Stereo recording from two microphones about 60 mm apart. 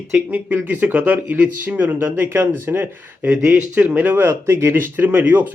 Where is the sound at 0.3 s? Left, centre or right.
Right.